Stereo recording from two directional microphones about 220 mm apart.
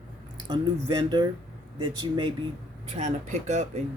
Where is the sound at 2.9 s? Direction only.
30° right (ahead or behind).